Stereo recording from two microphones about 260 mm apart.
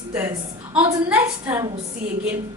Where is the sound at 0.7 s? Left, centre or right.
Centre.